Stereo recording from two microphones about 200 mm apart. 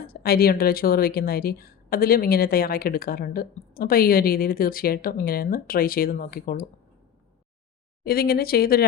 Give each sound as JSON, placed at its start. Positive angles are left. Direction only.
{"t": 0.0, "sound": "speech", "side_deg": 50}
{"t": 8.0, "sound": "speech", "side_deg": 50}